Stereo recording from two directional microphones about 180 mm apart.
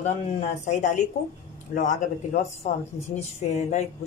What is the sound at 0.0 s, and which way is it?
Speech, 40° left (ahead or behind).